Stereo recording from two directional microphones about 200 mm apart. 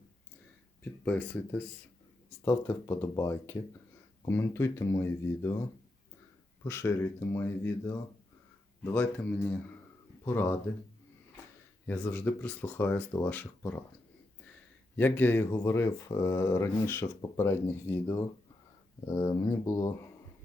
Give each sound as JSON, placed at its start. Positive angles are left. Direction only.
{"t": 1.0, "sound": "speech", "side_deg": 5}
{"t": 6.7, "sound": "speech", "side_deg": 10}
{"t": 10.2, "sound": "speech", "side_deg": 10}
{"t": 11.9, "sound": "speech", "side_deg": 10}
{"t": 14.9, "sound": "speech", "side_deg": 10}